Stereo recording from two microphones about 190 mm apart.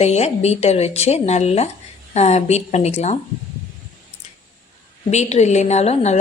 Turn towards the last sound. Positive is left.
turn(degrees=35)  # may be behind; listen again after turning